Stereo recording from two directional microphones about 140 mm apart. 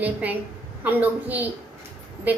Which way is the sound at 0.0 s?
10° right (ahead or behind).